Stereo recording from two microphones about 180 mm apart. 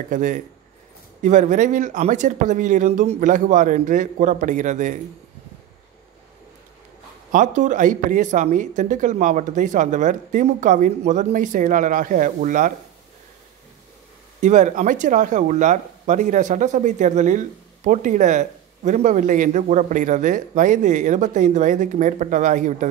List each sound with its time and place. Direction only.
0.1 s speech: 45° right (ahead or behind)
7.2 s speech: 45° right (ahead or behind)
14.4 s speech: 45° right (ahead or behind)